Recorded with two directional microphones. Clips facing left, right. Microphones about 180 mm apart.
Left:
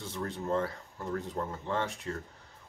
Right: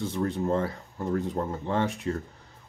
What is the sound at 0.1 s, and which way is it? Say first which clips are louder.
Speech: right 3 dB; 15° right (ahead or behind).